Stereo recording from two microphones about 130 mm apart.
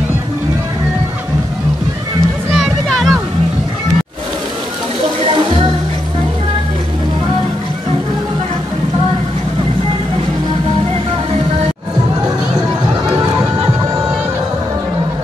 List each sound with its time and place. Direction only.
2.5 s music: centre (ahead or behind)
5.3 s music: 40° right (ahead or behind)